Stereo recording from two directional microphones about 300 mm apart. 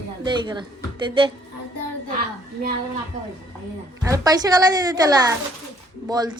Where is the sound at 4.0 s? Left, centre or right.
Centre.